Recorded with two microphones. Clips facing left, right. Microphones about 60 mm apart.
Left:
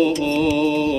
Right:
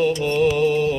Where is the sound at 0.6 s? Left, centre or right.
Centre.